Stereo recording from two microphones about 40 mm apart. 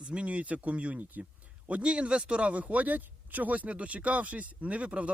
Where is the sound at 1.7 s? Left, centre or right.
Right.